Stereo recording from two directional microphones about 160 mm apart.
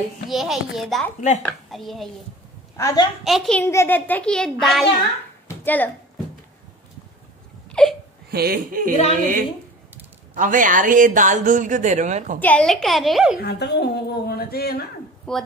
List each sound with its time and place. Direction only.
0.3 s a child's voice: centre (ahead or behind)
2.8 s a woman's voice: 20° left (ahead or behind)
3.3 s a child's voice: centre (ahead or behind)
7.7 s whimper: 5° left (ahead or behind)
8.3 s speech: 75° right (ahead or behind)
9.0 s a woman's voice: 55° right (ahead or behind)
12.4 s a child's voice: 10° left (ahead or behind)
13.4 s a woman's voice: 90° left
15.3 s a child's voice: 5° left (ahead or behind)